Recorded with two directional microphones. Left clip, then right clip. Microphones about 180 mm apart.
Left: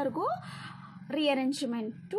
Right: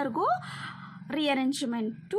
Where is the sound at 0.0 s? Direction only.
30° right (ahead or behind).